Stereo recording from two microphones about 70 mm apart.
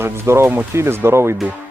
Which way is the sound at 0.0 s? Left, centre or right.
Right.